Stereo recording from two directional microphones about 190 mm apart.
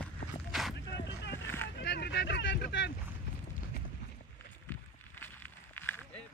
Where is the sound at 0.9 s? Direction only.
65° left (ahead or behind).